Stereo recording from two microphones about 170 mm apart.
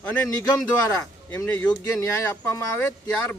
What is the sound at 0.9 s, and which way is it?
Speech, 15° left (ahead or behind).